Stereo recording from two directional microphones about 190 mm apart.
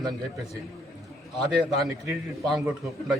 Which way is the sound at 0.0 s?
20° right (ahead or behind).